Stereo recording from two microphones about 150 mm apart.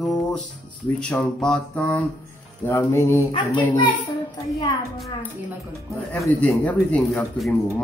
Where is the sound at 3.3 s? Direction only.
35° left (ahead or behind).